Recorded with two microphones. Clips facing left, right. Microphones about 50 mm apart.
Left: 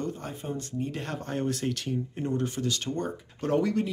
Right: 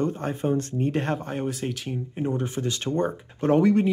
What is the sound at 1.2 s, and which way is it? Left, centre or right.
Speech, centre.